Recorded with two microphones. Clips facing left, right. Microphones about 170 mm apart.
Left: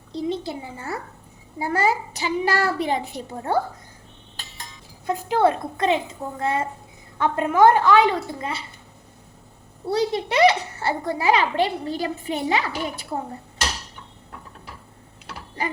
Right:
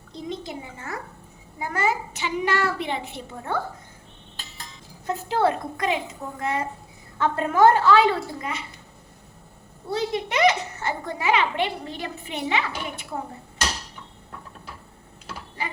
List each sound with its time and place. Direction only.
0.1 s a child's voice: 35° left (ahead or behind)
5.0 s a woman's voice: 15° left (ahead or behind)
7.2 s a woman's voice: 15° left (ahead or behind)
8.4 s a child's voice: 30° left (ahead or behind)
9.9 s a child's voice: 30° left (ahead or behind)